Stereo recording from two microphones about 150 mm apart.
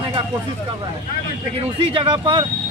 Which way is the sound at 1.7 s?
35° right (ahead or behind).